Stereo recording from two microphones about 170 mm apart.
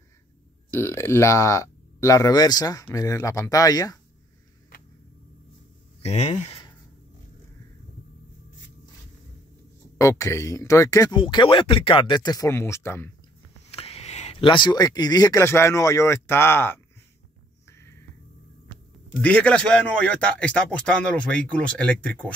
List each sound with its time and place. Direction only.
0.7 s speech: 15° left (ahead or behind)
6.0 s speech: 40° left (ahead or behind)
9.9 s speech: 20° left (ahead or behind)
13.7 s speech: 35° left (ahead or behind); by 16.8 s 15° left (ahead or behind)
17.6 s music: 15° left (ahead or behind)
19.2 s a man's voice: 5° left (ahead or behind)